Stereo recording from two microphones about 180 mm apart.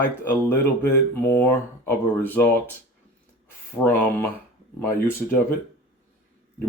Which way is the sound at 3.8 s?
10° left (ahead or behind).